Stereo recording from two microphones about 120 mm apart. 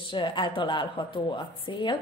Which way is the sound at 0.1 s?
40° left (ahead or behind).